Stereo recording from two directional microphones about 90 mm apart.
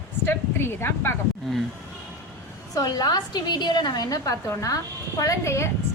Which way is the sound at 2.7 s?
45° left (ahead or behind).